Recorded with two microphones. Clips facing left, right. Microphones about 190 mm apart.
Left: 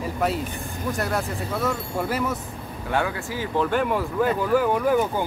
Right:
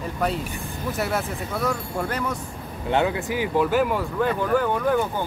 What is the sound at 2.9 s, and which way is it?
Speech, 25° right (ahead or behind).